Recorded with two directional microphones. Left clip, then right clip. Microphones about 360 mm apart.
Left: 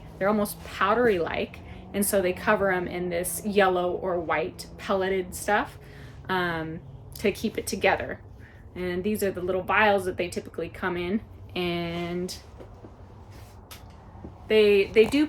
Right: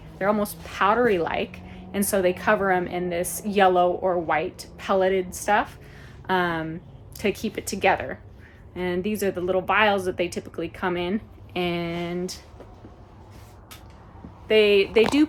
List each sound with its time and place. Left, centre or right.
0.2 s a woman's voice: centre
14.4 s a woman's voice: centre